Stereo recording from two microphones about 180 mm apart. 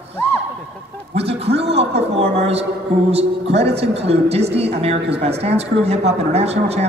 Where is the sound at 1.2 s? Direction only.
35° right (ahead or behind).